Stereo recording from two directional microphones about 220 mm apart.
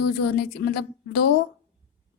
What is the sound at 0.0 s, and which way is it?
A woman's voice, 45° left (ahead or behind).